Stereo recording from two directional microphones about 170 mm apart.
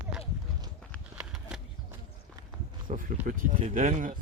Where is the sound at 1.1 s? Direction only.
5° right (ahead or behind).